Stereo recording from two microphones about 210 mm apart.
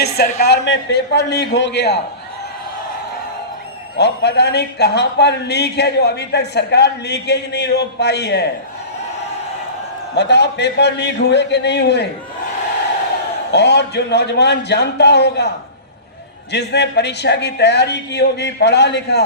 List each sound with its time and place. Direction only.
0.4 s speech: 55° left (ahead or behind)
3.9 s speech: 55° left (ahead or behind)
10.2 s speech: 55° left (ahead or behind)
13.5 s speech: 55° left (ahead or behind)
16.5 s speech: 55° left (ahead or behind)